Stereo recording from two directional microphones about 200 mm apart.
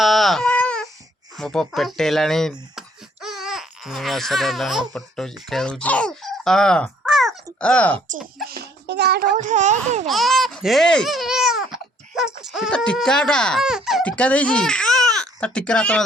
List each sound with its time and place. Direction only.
0.0 s baby cry: centre (ahead or behind)
1.4 s speech: centre (ahead or behind)
8.4 s a child's voice: 55° right (ahead or behind); by 10.1 s 35° right (ahead or behind)
10.1 s babbling: centre (ahead or behind)
12.4 s speech: centre (ahead or behind)